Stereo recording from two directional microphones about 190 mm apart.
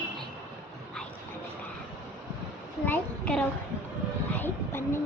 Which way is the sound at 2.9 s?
10° left (ahead or behind).